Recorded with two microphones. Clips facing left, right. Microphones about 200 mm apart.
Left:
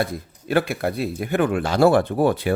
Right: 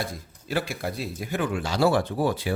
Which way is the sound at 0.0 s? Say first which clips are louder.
Left 8 dB; 60° left (ahead or behind).